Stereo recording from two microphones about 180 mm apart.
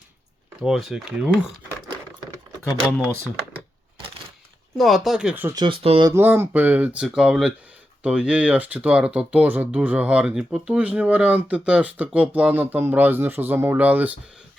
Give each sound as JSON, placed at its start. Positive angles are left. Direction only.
{"t": 0.6, "sound": "speech", "side_deg": 0}
{"t": 4.8, "sound": "speech", "side_deg": 0}
{"t": 5.5, "sound": "speech", "side_deg": -30}
{"t": 6.1, "sound": "speech", "side_deg": -15}